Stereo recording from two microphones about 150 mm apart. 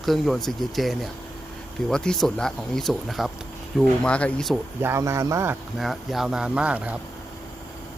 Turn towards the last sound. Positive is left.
turn(degrees=-10)  # may be behind; listen again after turning